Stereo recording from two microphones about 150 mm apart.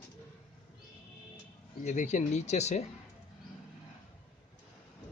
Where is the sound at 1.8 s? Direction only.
55° left (ahead or behind).